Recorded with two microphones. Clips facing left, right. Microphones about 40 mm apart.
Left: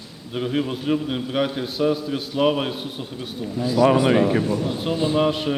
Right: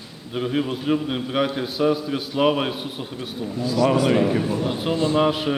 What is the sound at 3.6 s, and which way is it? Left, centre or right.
Speech, left.